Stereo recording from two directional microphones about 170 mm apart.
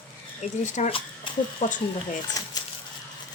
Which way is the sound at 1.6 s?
50° left (ahead or behind).